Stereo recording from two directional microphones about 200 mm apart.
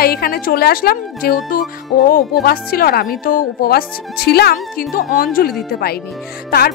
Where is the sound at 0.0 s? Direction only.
50° left (ahead or behind).